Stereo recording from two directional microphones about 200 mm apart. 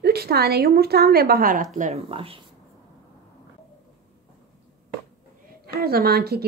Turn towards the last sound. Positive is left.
turn(degrees=-50)  # may be behind; listen again after turning